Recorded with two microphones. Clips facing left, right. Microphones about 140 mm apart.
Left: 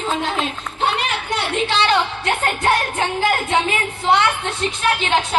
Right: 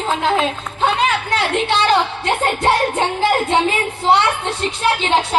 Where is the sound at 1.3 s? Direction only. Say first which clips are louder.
Right 3 dB; 90° right.